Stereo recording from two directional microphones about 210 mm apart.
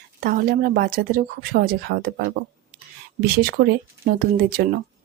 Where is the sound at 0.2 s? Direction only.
45° right (ahead or behind).